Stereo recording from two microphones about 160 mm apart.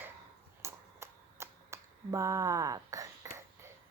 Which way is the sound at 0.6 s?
15° right (ahead or behind).